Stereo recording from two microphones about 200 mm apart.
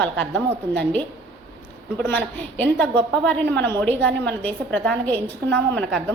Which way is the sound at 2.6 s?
5° left (ahead or behind).